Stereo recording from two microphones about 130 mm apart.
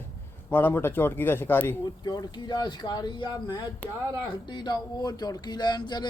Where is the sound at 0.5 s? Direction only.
15° left (ahead or behind).